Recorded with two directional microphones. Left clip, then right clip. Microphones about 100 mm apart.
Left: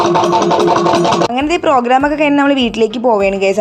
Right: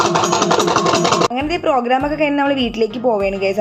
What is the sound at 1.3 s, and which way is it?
A woman's voice, 55° left (ahead or behind).